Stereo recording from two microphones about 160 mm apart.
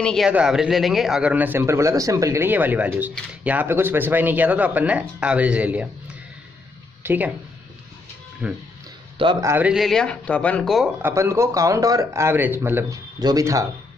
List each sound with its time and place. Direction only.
0.0 s a man's voice: 5° left (ahead or behind)
7.0 s speech: 10° right (ahead or behind)
8.4 s speech: 5° right (ahead or behind)
9.2 s speech: 30° right (ahead or behind)
9.5 s speech: 10° right (ahead or behind)
11.0 s a man's voice: 15° right (ahead or behind)